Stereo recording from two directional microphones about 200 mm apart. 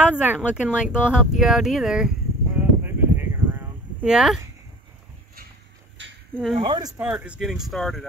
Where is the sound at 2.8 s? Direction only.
10° right (ahead or behind).